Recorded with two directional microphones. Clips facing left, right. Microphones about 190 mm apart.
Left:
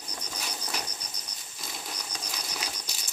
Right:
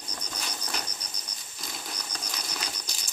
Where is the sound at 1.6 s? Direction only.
Centre (ahead or behind).